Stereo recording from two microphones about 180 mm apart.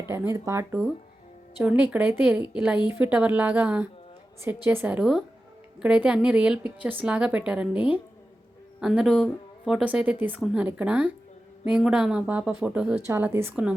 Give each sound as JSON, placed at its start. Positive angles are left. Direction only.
{"t": 0.1, "sound": "speech", "side_deg": -15}